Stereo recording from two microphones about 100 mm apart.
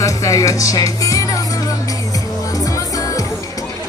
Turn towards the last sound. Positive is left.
turn(degrees=35)  # may be behind; listen again after turning